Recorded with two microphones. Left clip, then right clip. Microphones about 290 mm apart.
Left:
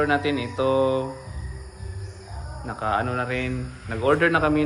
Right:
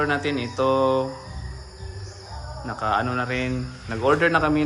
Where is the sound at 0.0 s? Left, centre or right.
Centre.